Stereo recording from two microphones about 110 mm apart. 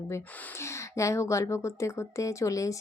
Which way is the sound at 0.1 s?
25° left (ahead or behind).